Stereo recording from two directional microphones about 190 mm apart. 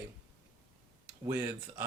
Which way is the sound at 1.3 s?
15° right (ahead or behind).